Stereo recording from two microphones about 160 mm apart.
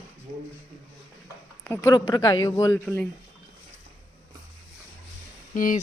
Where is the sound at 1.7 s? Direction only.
15° left (ahead or behind).